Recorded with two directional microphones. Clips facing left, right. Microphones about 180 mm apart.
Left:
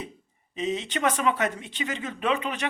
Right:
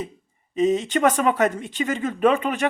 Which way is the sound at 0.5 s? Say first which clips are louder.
Right 9 dB; 45° right (ahead or behind).